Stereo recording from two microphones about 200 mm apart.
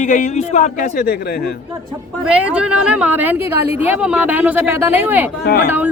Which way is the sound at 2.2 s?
5° right (ahead or behind).